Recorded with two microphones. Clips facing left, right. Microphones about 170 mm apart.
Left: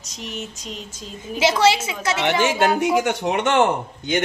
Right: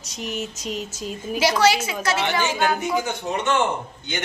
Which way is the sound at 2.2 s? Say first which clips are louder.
Left 6 dB; 80° left.